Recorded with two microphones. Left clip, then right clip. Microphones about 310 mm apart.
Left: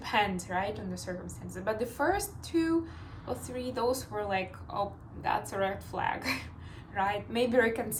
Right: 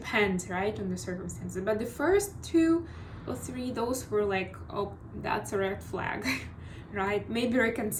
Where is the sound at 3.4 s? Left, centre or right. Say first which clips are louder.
Left 2 dB; centre.